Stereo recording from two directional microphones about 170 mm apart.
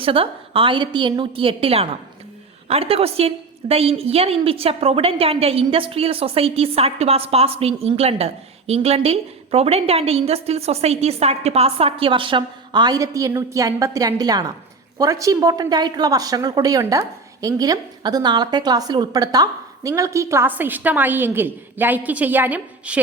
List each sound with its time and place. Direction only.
0.0 s a woman's voice: 30° right (ahead or behind); by 23.0 s 10° right (ahead or behind)